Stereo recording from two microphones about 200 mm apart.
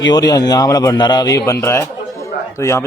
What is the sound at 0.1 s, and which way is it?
A man's voice, 20° left (ahead or behind).